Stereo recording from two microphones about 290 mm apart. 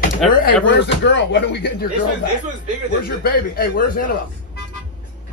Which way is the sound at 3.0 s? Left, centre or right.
Left.